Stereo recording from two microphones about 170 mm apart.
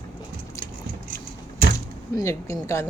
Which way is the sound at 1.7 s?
20° left (ahead or behind).